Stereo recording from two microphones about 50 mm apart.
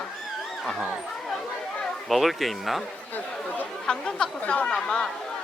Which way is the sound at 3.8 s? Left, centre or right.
Centre.